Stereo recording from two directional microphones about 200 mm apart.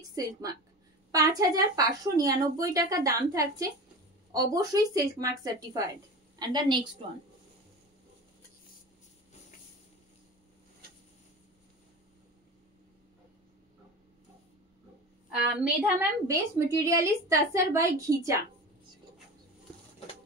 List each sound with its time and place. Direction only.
0.1 s a woman's voice: 15° right (ahead or behind)
15.6 s a woman's voice: 10° right (ahead or behind)